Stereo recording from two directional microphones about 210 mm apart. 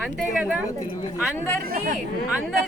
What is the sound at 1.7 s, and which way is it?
Speech, 40° right (ahead or behind).